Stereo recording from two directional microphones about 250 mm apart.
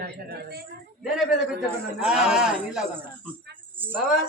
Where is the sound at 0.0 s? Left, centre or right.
Right.